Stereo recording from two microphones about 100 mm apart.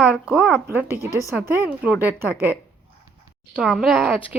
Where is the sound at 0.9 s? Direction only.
30° left (ahead or behind).